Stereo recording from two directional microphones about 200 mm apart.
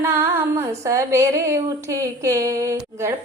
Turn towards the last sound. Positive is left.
turn(degrees=-15)  # may be behind; listen again after turning